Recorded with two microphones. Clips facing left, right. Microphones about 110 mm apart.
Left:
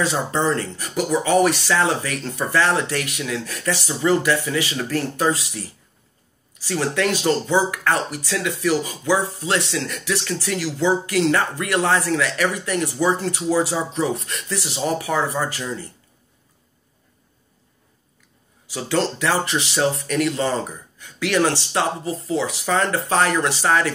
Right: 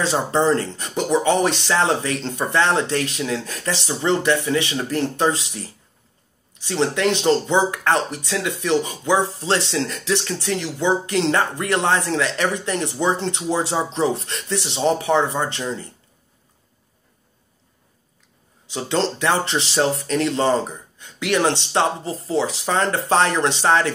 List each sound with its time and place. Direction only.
0.0 s speech: 30° right (ahead or behind)
18.7 s speech: 25° right (ahead or behind)